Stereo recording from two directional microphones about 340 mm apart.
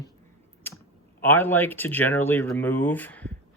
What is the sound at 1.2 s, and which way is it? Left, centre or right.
Speech, centre.